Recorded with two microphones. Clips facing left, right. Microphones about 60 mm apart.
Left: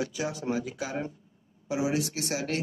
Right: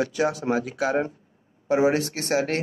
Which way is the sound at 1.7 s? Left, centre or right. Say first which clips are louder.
Right 8 dB; right.